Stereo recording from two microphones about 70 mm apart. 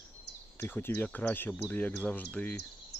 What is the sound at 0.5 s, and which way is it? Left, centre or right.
Speech, left.